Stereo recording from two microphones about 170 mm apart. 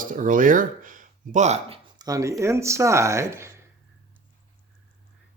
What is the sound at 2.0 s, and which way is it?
Speech, 20° right (ahead or behind).